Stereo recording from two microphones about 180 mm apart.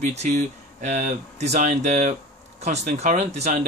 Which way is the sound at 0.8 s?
40° right (ahead or behind).